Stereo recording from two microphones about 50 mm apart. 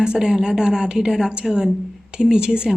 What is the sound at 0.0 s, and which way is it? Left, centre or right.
Speech, centre.